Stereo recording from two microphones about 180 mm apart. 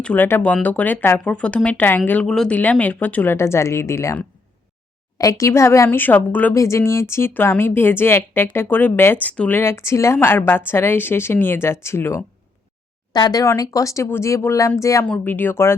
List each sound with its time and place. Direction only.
0.0 s speech: 10° left (ahead or behind)